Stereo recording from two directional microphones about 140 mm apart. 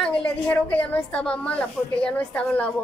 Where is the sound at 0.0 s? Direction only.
10° left (ahead or behind).